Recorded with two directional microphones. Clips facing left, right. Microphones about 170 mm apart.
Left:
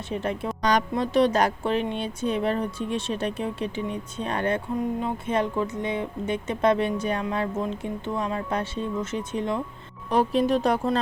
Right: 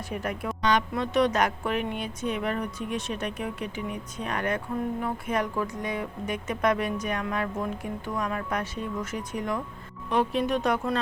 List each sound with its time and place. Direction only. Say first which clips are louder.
0.1 s speech: left 4 dB; 25° left (ahead or behind)
0.6 s speech: left 2 dB; 40° left (ahead or behind)
10.1 s speech: left 4 dB; 35° left (ahead or behind)